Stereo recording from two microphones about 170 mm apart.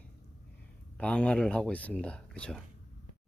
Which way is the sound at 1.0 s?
10° left (ahead or behind).